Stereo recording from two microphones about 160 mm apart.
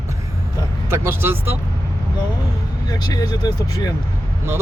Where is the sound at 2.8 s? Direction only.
25° left (ahead or behind).